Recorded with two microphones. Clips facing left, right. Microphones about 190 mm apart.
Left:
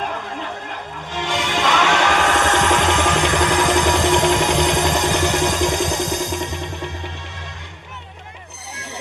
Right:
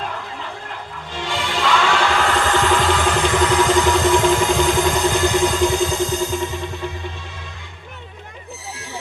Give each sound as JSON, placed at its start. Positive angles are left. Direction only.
{"t": 1.1, "sound": "music", "side_deg": 75}